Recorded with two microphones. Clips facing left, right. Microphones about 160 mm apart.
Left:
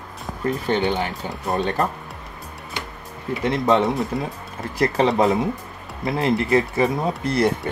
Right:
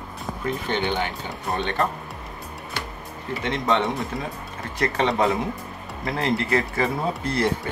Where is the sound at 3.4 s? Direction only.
35° left (ahead or behind).